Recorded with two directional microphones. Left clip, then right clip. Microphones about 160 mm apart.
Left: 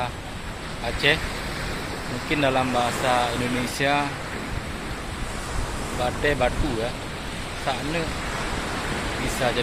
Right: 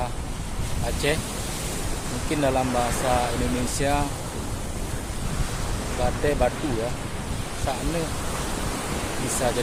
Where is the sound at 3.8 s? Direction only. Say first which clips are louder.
Left 3 dB; 10° right (ahead or behind).